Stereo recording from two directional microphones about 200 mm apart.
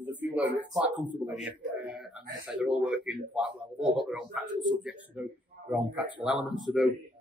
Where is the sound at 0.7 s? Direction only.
5° right (ahead or behind).